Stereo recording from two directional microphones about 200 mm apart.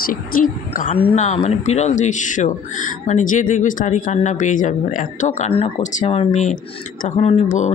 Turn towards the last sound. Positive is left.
turn(degrees=35)  # may be behind; listen again after turning